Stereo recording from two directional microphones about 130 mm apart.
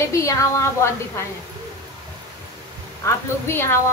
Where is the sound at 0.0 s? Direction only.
25° left (ahead or behind).